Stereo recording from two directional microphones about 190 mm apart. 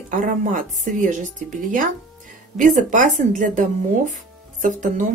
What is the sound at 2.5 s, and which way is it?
A woman's voice, 40° right (ahead or behind).